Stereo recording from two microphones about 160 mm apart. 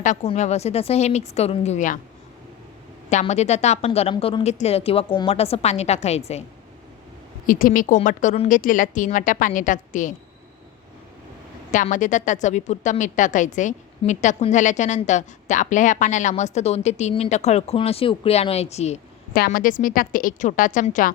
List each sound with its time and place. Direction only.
0.0 s a woman's voice: 50° left (ahead or behind)
3.1 s a woman's voice: 45° left (ahead or behind)
7.4 s a woman's voice: 60° left (ahead or behind)
11.7 s a woman's voice: 50° left (ahead or behind)
19.3 s a woman's voice: 65° left (ahead or behind)